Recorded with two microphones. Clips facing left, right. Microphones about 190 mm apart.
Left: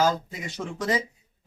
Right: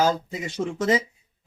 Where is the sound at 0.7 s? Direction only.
20° right (ahead or behind).